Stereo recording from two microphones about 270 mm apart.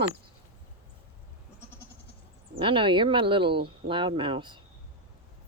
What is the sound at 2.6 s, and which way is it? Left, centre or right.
Speech, centre.